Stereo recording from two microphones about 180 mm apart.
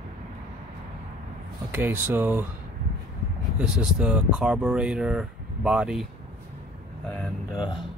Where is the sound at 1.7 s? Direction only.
10° right (ahead or behind).